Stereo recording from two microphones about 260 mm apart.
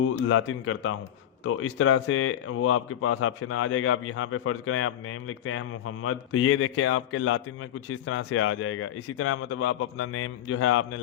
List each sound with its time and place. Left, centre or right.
0.0 s a man's voice: left